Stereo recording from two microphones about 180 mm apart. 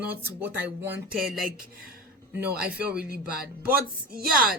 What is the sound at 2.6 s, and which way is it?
Speech, 60° right (ahead or behind).